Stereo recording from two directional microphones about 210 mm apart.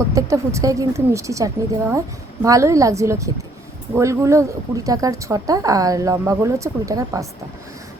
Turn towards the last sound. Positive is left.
turn(degrees=-15)  # may be behind; listen again after turning